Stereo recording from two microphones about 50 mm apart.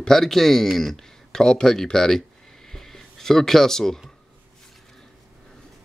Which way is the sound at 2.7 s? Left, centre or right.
Centre.